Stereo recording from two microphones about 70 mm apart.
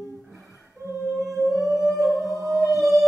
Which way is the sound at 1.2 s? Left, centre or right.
Centre.